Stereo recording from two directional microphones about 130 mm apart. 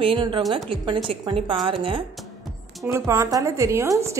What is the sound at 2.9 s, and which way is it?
A woman's voice, 25° right (ahead or behind).